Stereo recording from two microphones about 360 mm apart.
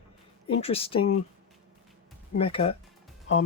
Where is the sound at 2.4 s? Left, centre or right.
Centre.